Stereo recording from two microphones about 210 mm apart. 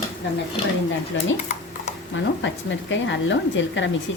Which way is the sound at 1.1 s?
65° left (ahead or behind).